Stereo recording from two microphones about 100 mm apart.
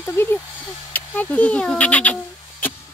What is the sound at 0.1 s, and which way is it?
Speech, 25° left (ahead or behind).